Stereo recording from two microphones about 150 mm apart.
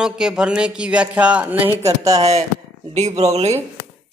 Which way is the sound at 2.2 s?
45° right (ahead or behind).